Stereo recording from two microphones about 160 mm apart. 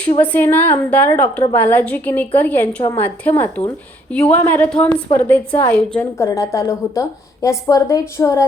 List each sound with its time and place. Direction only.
0.2 s a woman's voice: 10° left (ahead or behind)
6.2 s a woman's voice: 20° left (ahead or behind)